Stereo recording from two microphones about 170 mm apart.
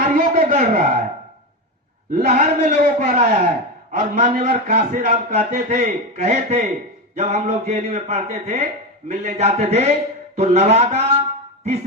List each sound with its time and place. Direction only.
0.0 s a sound: 55° right (ahead or behind)
2.0 s a man's voice: 40° right (ahead or behind)
3.9 s a man's voice: 55° right (ahead or behind)
4.4 s a man's voice: 45° right (ahead or behind)